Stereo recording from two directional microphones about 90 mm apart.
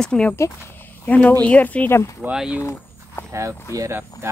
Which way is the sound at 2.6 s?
30° left (ahead or behind).